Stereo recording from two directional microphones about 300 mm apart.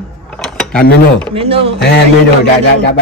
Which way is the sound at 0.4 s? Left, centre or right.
Centre.